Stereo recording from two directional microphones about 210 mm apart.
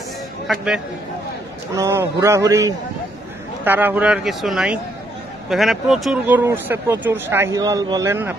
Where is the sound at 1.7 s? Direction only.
15° right (ahead or behind).